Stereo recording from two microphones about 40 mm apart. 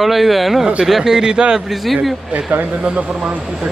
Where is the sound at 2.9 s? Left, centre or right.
Right.